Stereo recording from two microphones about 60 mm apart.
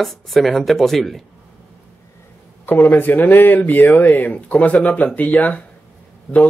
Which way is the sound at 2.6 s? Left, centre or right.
Left.